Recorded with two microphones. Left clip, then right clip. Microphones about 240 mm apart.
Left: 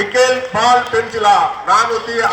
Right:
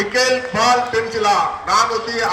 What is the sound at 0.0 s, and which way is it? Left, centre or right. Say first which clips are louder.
A man's voice: left 3 dB; centre.